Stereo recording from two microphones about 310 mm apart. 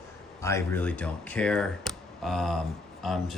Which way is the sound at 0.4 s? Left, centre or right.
Centre.